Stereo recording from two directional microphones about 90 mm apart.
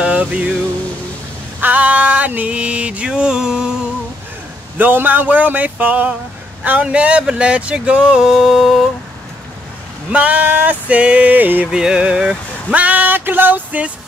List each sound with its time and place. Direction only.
0.0 s music: 15° right (ahead or behind)
1.6 s speech: 20° right (ahead or behind)
4.7 s a sound: 20° right (ahead or behind)
6.6 s speech: 15° right (ahead or behind)
10.0 s speech: 15° right (ahead or behind)
11.7 s speech: 10° right (ahead or behind)